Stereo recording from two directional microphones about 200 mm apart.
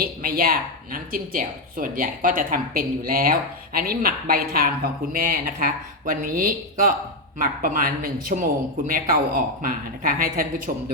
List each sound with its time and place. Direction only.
0.0 s a woman's voice: 45° right (ahead or behind)
10.7 s speech: 35° right (ahead or behind)